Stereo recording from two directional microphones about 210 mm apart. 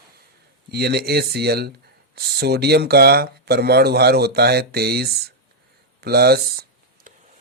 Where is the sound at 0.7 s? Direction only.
50° right (ahead or behind).